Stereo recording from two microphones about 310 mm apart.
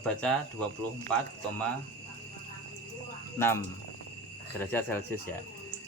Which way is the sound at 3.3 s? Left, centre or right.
Centre.